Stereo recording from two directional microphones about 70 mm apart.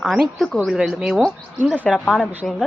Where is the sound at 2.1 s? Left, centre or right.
Centre.